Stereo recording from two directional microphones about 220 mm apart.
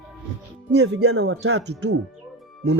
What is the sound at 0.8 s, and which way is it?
Speech, 50° right (ahead or behind).